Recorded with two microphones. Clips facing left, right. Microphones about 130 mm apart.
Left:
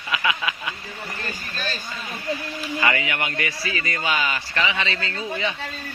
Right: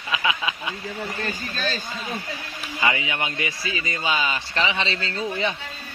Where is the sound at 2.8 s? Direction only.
15° right (ahead or behind); by 5.5 s 35° right (ahead or behind).